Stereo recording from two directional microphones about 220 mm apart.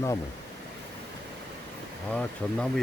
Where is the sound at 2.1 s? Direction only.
5° left (ahead or behind).